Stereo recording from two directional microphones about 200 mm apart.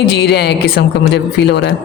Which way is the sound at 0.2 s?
55° left (ahead or behind).